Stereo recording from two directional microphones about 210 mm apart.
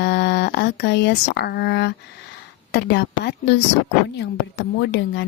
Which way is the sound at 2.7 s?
55° left (ahead or behind).